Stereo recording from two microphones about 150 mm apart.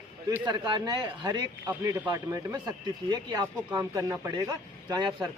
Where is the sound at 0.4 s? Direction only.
30° right (ahead or behind).